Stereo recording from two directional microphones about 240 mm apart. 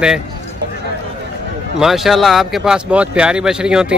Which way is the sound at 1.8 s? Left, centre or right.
Centre.